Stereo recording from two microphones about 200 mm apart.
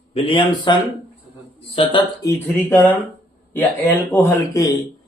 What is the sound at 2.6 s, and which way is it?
Speech, 10° left (ahead or behind).